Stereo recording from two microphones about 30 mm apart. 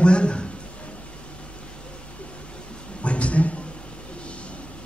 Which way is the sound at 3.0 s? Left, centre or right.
Left.